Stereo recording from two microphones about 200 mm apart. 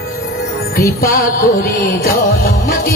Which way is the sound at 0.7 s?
50° left (ahead or behind).